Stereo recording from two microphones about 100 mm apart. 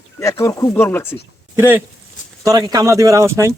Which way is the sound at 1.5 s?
20° right (ahead or behind).